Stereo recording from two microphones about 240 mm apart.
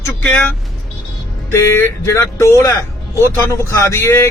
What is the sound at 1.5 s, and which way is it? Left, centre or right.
Speech, centre.